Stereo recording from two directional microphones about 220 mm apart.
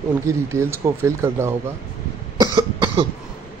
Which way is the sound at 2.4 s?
20° right (ahead or behind).